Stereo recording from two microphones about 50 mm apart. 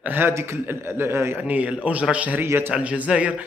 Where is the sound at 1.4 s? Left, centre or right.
Right.